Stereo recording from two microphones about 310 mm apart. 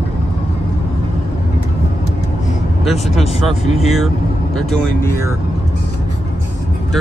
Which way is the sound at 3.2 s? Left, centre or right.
Left.